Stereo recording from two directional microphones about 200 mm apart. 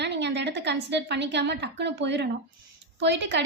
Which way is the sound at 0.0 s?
60° right (ahead or behind).